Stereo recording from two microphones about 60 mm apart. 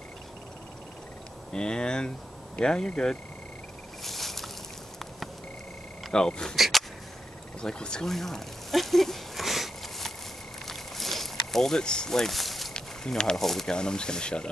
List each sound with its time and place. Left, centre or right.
1.5 s speech: centre
4.0 s a sound: centre
6.1 s speech: centre
6.5 s speech: centre
7.6 s a sound: centre
12.7 s speech: centre